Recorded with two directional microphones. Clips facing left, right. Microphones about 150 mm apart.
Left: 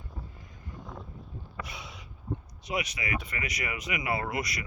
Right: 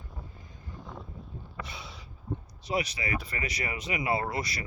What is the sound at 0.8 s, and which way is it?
Boat, centre (ahead or behind).